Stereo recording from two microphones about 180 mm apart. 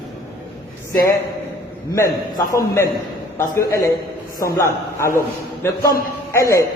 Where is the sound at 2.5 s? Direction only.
15° left (ahead or behind).